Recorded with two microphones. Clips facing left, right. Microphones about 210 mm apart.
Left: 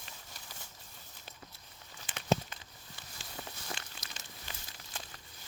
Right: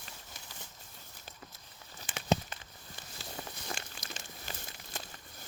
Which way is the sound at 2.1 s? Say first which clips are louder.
Even; 45° right (ahead or behind).